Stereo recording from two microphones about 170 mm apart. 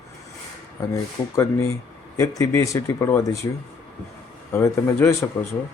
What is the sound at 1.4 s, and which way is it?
A man's voice, 15° left (ahead or behind).